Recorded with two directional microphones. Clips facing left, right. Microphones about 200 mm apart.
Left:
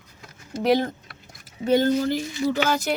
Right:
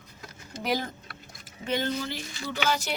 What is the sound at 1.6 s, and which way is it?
Speech, 40° left (ahead or behind).